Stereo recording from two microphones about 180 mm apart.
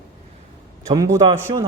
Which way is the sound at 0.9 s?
20° right (ahead or behind).